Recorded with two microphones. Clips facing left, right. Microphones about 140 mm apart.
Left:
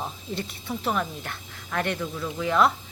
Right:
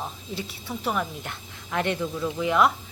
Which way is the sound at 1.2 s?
20° right (ahead or behind).